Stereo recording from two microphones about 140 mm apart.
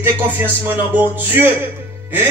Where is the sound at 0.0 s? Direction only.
15° right (ahead or behind).